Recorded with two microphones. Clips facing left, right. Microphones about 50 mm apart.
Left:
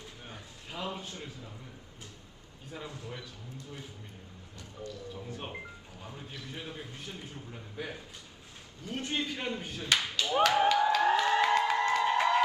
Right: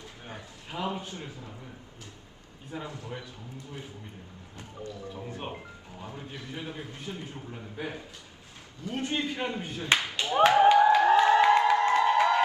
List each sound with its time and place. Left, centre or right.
0.3 s a man's voice: right
2.8 s speech: right
4.5 s a man's voice: right
11.8 s music: right